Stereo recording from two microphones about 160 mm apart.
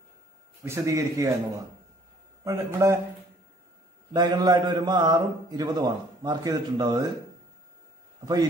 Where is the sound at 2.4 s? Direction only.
20° right (ahead or behind).